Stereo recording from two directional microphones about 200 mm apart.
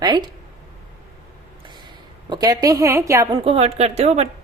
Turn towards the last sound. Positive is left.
turn(degrees=-30)  # may be behind; listen again after turning